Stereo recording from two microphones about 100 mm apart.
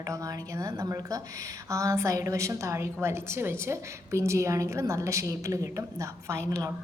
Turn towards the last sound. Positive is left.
turn(degrees=-30)  # may be behind; listen again after turning